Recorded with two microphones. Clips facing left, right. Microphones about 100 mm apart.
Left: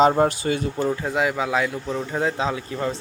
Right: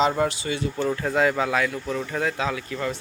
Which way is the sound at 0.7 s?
15° left (ahead or behind).